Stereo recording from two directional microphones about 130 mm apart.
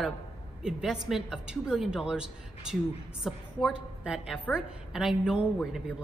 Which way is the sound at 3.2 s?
5° right (ahead or behind).